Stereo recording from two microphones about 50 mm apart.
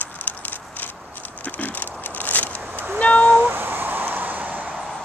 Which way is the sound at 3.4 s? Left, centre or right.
Right.